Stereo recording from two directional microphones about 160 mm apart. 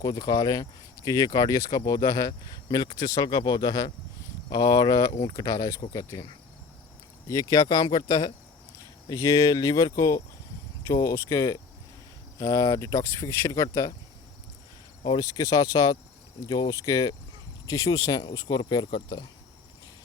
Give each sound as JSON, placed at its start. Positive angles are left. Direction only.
{"t": 0.0, "sound": "speech", "side_deg": 20}
{"t": 7.3, "sound": "speech", "side_deg": 25}
{"t": 15.0, "sound": "speech", "side_deg": 25}